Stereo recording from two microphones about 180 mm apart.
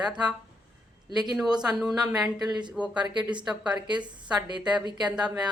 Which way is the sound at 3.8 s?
25° right (ahead or behind).